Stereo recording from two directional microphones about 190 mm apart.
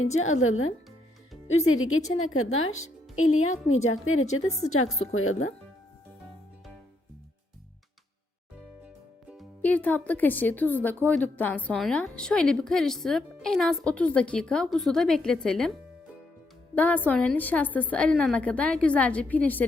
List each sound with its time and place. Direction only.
0.2 s a woman's voice: 90° left
2.0 s a woman's voice: 35° left (ahead or behind)
2.2 s a woman's voice: 90° left
9.4 s a woman's voice: 10° left (ahead or behind)
16.7 s a woman's voice: 10° left (ahead or behind)